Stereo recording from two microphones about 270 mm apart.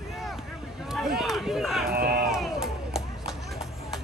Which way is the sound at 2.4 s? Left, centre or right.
Centre.